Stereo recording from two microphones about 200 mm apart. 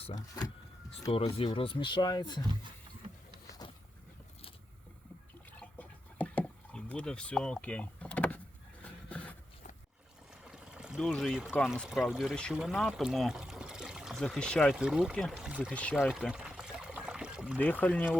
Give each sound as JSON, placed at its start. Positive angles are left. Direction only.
{"t": 0.2, "sound": "speech", "side_deg": 15}
{"t": 3.6, "sound": "vehicle", "side_deg": 20}
{"t": 5.5, "sound": "a sound", "side_deg": 5}
{"t": 10.4, "sound": "speech", "side_deg": -5}
{"t": 15.7, "sound": "pour", "side_deg": 5}
{"t": 17.6, "sound": "speech", "side_deg": 10}